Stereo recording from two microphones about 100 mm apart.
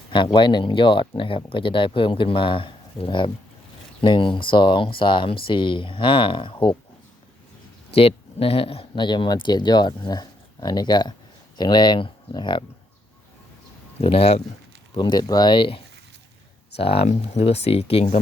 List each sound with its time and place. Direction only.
0.3 s speech: 50° left (ahead or behind)
7.9 s speech: 75° left (ahead or behind)
9.0 s speech: 50° left (ahead or behind)
14.0 s speech: 75° left (ahead or behind)
14.9 s speech: 45° left (ahead or behind)
16.7 s speech: 80° left